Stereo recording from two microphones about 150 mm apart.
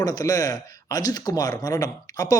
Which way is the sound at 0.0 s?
25° left (ahead or behind).